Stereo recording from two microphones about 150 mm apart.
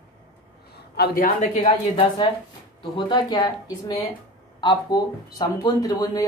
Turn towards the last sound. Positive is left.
turn(degrees=25)  # may be behind; listen again after turning